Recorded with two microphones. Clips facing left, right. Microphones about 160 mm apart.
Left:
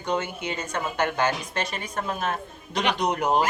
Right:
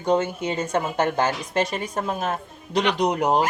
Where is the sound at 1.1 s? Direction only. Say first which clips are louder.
Right 3 dB; 35° right (ahead or behind).